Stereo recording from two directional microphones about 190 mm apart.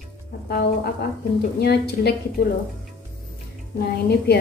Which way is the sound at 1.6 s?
55° left (ahead or behind).